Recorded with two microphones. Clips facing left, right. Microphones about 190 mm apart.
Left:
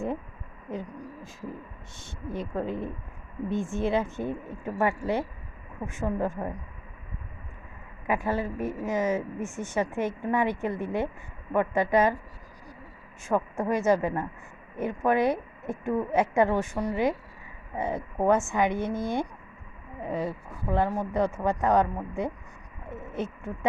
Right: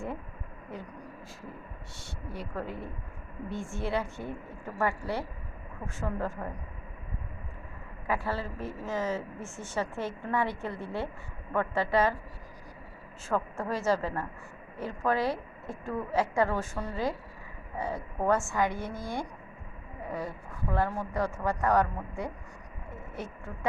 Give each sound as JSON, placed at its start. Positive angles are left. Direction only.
{"t": 0.7, "sound": "a woman's voice", "side_deg": 20}
{"t": 8.0, "sound": "a woman's voice", "side_deg": 15}
{"t": 13.2, "sound": "a woman's voice", "side_deg": 15}
{"t": 22.9, "sound": "a sound", "side_deg": 20}